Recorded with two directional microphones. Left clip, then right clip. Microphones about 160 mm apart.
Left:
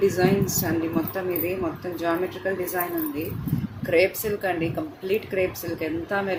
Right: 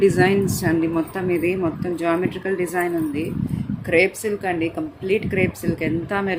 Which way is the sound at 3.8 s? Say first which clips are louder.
Right 3 dB; 40° right (ahead or behind).